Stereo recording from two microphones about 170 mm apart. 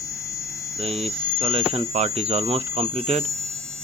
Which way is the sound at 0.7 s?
35° right (ahead or behind).